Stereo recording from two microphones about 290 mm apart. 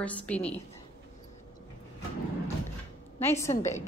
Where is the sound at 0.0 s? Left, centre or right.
Centre.